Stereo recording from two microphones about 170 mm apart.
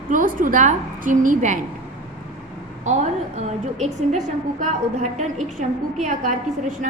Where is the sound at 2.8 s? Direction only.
40° right (ahead or behind).